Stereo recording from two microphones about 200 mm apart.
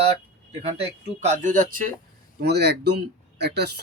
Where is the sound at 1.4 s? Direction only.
40° right (ahead or behind).